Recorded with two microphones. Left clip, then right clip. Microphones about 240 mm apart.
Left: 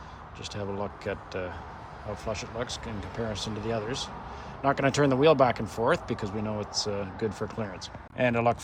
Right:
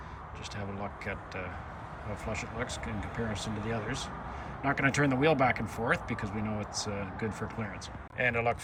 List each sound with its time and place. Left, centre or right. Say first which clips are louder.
0.5 s speech: left 6 dB; centre